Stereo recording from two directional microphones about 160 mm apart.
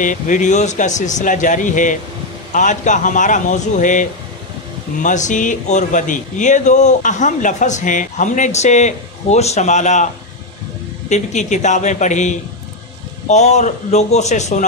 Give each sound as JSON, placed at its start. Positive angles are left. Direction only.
{"t": 0.0, "sound": "speech", "side_deg": 55}
{"t": 11.1, "sound": "speech", "side_deg": 45}